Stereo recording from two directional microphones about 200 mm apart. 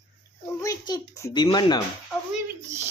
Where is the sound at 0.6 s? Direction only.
20° left (ahead or behind).